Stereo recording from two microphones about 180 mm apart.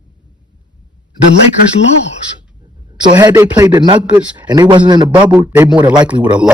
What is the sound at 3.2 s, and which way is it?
A man's voice, 15° right (ahead or behind).